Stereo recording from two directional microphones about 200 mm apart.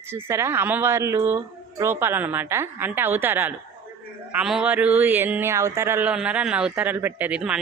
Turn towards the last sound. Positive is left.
turn(degrees=-5)  # may be behind; listen again after turning